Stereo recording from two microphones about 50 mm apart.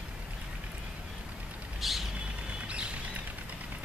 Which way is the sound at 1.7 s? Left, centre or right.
Centre.